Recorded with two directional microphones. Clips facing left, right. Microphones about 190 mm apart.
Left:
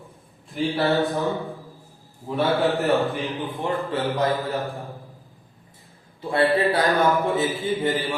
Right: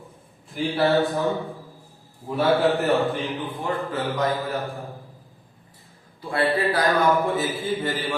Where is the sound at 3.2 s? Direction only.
15° left (ahead or behind).